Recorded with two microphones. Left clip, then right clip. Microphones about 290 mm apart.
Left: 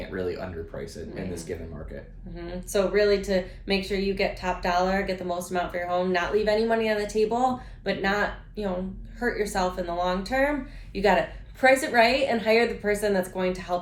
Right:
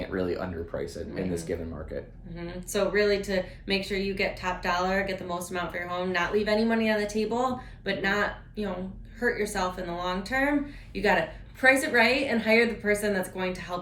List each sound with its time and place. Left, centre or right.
0.2 s speech: centre
2.3 s a woman's voice: centre